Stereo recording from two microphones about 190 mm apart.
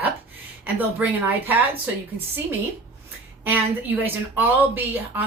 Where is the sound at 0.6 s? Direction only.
10° right (ahead or behind).